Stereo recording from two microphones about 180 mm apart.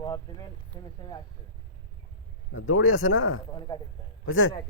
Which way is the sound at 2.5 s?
90° left.